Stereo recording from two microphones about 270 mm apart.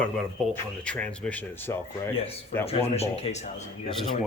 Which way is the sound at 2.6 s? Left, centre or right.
Left.